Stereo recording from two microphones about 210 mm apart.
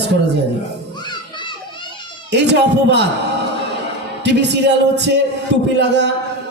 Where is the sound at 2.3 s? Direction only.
55° right (ahead or behind).